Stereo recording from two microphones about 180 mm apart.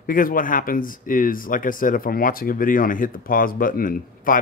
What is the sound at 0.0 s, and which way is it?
Speech, 50° left (ahead or behind).